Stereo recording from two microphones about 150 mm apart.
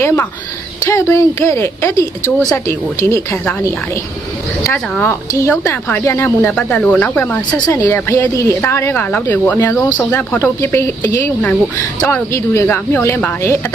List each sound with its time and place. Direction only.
0.0 s speech: 20° left (ahead or behind)
4.6 s speech: 15° left (ahead or behind)